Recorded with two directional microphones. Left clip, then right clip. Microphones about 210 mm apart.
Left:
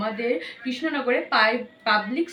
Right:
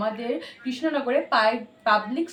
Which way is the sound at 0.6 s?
20° right (ahead or behind).